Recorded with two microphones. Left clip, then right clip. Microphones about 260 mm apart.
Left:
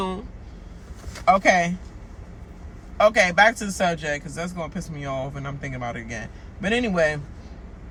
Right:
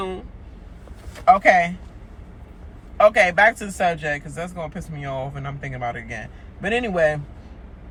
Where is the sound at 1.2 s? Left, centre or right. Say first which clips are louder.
Right 3 dB; centre.